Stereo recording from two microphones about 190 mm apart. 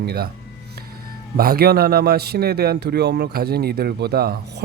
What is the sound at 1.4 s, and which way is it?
A man's voice, 55° right (ahead or behind).